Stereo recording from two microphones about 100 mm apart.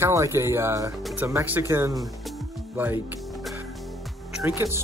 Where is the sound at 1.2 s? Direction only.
20° right (ahead or behind).